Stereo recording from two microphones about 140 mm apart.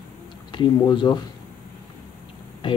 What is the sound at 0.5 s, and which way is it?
Speech, 30° left (ahead or behind).